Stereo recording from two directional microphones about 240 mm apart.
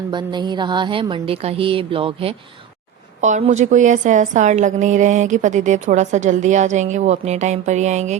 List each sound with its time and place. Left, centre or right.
0.1 s a woman's voice: centre